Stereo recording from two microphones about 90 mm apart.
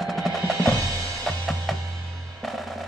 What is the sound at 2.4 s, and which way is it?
Drum, centre (ahead or behind).